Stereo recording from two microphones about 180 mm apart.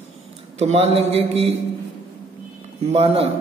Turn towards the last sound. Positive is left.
turn(degrees=-35)  # may be behind; listen again after turning